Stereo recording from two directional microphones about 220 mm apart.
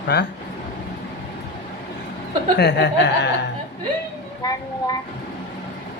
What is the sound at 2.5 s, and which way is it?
Speech, 50° left (ahead or behind).